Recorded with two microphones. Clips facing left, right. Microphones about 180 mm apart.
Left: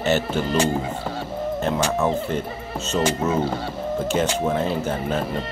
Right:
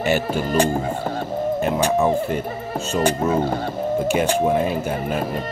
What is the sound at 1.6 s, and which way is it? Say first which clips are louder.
Speech: right 2 dB; 10° right (ahead or behind).